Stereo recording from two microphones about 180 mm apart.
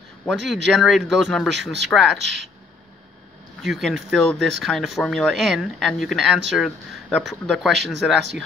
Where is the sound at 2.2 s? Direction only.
75° right (ahead or behind).